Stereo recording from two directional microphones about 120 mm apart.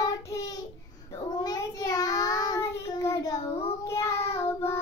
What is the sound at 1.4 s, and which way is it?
Child singing, 30° left (ahead or behind).